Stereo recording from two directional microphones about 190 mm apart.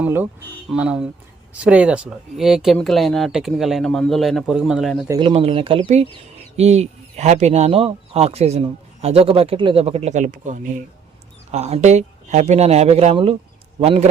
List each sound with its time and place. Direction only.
0.0 s speech: 10° right (ahead or behind)
5.2 s speech: 30° right (ahead or behind)